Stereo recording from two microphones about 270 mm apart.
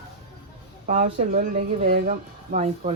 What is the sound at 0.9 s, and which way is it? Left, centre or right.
Speech, right.